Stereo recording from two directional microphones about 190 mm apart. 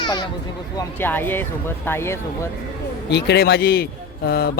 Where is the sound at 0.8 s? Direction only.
10° left (ahead or behind).